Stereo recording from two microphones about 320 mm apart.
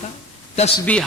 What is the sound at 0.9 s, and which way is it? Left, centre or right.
Speech, centre.